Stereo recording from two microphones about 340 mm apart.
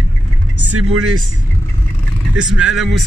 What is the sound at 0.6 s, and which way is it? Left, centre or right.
Speech, right.